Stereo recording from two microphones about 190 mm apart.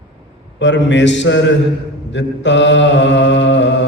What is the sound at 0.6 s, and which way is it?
Mantra, 70° left (ahead or behind).